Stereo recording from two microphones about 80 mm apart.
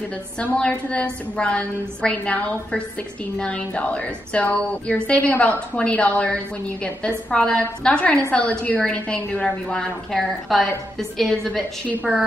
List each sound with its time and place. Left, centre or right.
0.4 s a woman's voice: centre